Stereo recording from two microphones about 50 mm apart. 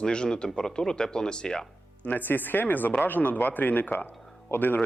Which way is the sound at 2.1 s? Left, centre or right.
Left.